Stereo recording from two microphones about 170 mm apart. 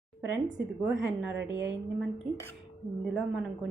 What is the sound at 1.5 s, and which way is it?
Speech, 90° right.